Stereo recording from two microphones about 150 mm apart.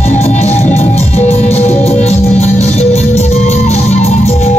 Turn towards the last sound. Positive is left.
turn(degrees=45)  # may be behind; listen again after turning